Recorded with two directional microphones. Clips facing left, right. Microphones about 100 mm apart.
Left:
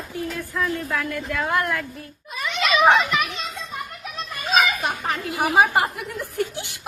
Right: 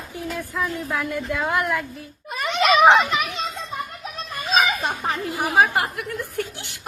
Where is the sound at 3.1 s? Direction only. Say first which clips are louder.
Even; 20° right (ahead or behind).